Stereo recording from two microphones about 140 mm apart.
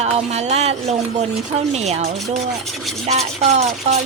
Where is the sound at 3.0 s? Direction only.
50° right (ahead or behind).